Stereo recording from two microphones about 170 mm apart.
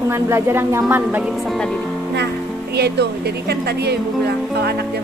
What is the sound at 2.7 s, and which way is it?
Speech, 75° right (ahead or behind).